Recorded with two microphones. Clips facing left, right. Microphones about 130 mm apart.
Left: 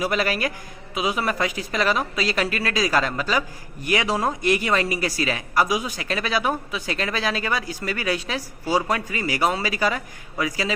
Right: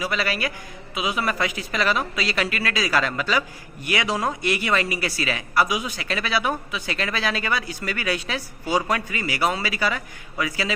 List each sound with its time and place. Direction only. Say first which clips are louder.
0.0 s a man's voice: left 3 dB; 45° left (ahead or behind)